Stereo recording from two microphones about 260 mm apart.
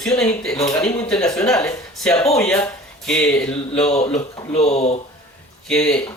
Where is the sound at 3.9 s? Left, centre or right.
Left.